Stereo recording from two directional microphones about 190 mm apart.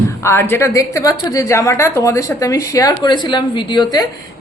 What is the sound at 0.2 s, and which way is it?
A woman's voice, 15° left (ahead or behind).